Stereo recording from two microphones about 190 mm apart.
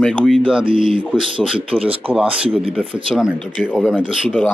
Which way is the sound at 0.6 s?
30° right (ahead or behind).